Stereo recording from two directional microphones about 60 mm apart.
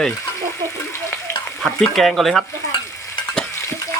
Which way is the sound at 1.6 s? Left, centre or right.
Centre.